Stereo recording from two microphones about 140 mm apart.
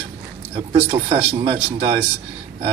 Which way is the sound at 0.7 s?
40° right (ahead or behind).